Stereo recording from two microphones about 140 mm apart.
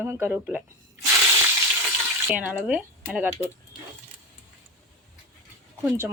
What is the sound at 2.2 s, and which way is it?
Speech, 10° right (ahead or behind).